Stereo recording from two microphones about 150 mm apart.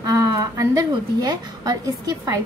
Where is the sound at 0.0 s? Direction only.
25° right (ahead or behind).